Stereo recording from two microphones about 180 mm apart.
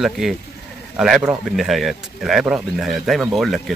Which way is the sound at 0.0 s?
Centre (ahead or behind).